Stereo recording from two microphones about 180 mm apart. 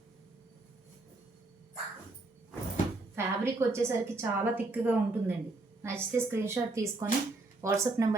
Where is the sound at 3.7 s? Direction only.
10° right (ahead or behind).